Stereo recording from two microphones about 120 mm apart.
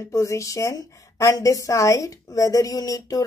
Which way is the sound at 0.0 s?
25° left (ahead or behind).